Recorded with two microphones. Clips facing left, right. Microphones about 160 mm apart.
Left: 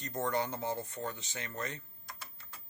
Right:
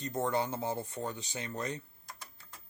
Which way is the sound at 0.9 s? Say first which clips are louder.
Right 2 dB; 10° right (ahead or behind).